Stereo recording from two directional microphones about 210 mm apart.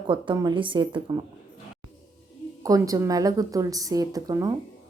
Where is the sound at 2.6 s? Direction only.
15° right (ahead or behind).